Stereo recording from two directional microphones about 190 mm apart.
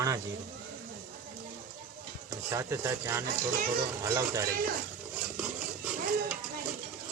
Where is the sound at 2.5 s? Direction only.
15° right (ahead or behind).